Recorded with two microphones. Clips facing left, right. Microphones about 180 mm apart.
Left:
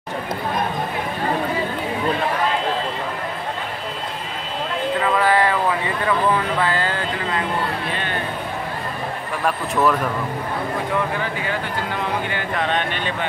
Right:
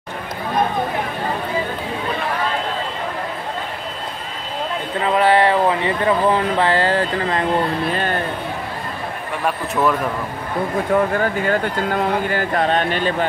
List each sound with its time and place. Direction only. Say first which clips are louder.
5.0 s speech: right 4 dB; 25° right (ahead or behind); by 8.2 s 45° right (ahead or behind)
10.9 s speech: right 6 dB; 45° right (ahead or behind)